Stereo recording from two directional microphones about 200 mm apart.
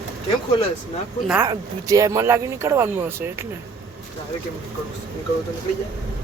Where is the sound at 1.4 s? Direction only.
15° right (ahead or behind).